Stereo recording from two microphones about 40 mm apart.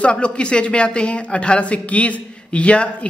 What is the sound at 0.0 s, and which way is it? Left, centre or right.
Speech, left.